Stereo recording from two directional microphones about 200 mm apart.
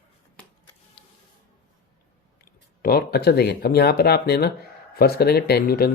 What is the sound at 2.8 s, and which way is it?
Speech, 50° left (ahead or behind).